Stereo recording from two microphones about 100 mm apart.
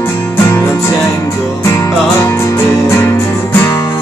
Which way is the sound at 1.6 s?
25° left (ahead or behind).